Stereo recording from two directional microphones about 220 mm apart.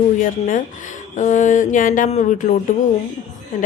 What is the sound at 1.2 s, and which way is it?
A woman's voice, 35° left (ahead or behind).